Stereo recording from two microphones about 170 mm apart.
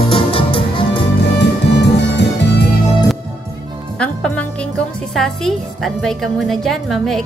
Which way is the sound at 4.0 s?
5° left (ahead or behind).